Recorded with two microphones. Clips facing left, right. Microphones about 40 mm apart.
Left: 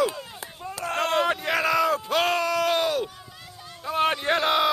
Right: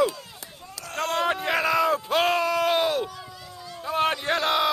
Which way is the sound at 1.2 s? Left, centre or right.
Centre.